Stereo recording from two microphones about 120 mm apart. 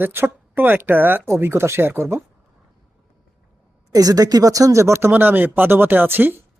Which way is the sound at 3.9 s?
30° right (ahead or behind).